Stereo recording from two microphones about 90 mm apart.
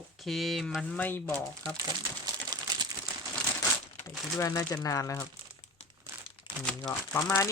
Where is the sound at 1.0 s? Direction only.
25° left (ahead or behind).